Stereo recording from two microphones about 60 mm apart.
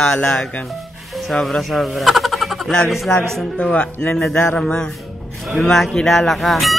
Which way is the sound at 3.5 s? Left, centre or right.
Centre.